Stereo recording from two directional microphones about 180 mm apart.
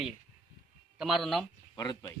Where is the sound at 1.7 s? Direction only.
20° left (ahead or behind).